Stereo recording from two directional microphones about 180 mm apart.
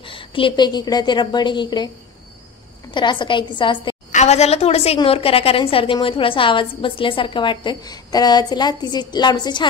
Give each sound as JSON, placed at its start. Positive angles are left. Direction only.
{"t": 0.0, "sound": "a woman's voice", "side_deg": 30}
{"t": 2.9, "sound": "a woman's voice", "side_deg": 25}
{"t": 4.1, "sound": "a woman's voice", "side_deg": 40}